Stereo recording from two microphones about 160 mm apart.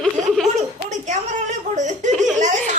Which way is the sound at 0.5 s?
45° right (ahead or behind).